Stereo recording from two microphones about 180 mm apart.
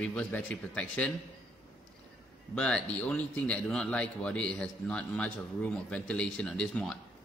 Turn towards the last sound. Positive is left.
turn(degrees=5)  # may be behind; listen again after turning